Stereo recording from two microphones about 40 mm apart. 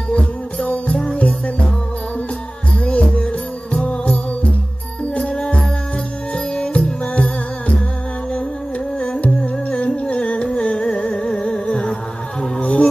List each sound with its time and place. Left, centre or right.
0.1 s music: left
2.8 s music: left
6.3 s music: left
9.2 s music: left